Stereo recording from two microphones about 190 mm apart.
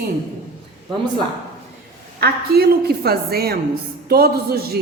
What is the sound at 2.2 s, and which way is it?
A woman's voice, 55° right (ahead or behind).